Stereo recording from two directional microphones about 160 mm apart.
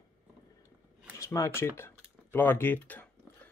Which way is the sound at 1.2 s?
20° left (ahead or behind).